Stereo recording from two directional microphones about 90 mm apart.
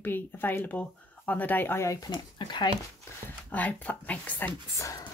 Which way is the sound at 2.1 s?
55° left (ahead or behind).